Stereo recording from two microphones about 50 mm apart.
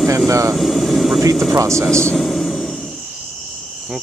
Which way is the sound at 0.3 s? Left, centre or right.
Right.